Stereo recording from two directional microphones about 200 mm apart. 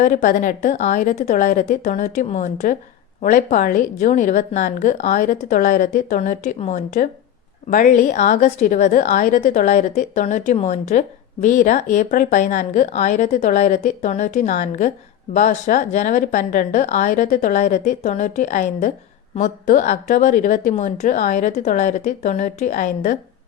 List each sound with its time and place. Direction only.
0.0 s a woman's voice: 40° left (ahead or behind)